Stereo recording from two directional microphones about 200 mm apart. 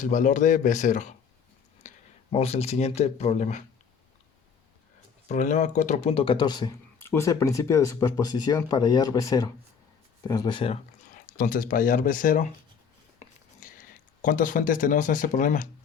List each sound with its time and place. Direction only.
0.0 s speech: 40° left (ahead or behind)
1.8 s a sound: 35° left (ahead or behind)
2.3 s speech: 30° left (ahead or behind)
5.3 s speech: 35° left (ahead or behind)
11.3 s speech: 45° left (ahead or behind)
14.2 s speech: 40° left (ahead or behind)